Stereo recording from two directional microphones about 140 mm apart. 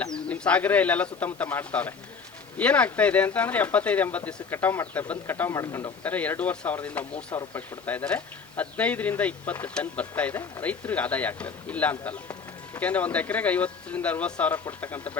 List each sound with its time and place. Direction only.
0.0 s speech: 5° left (ahead or behind)